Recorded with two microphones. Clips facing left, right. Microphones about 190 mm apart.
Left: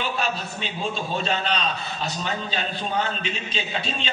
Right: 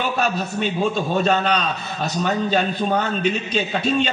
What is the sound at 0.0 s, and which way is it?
A man's voice, 45° right (ahead or behind).